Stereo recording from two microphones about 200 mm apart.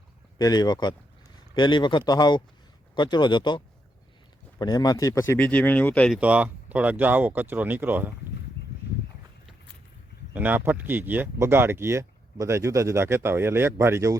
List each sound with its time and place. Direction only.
0.3 s speech: 20° left (ahead or behind)
6.1 s speech: 5° right (ahead or behind)
10.3 s speech: 10° right (ahead or behind)